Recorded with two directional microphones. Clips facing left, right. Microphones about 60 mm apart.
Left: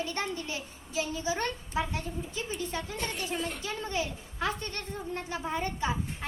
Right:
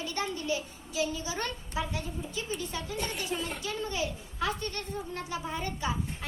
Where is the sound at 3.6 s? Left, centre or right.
Left.